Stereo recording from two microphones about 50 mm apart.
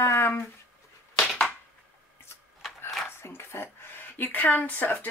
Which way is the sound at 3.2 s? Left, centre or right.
Left.